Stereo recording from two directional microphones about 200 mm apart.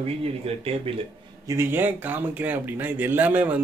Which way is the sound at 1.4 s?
10° right (ahead or behind).